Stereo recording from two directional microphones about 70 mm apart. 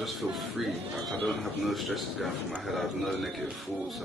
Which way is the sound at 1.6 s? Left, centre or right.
Centre.